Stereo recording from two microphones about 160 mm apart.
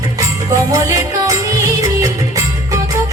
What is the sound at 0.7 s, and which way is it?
Music, 20° right (ahead or behind).